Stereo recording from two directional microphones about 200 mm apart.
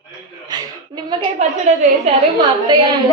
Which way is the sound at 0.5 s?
20° right (ahead or behind).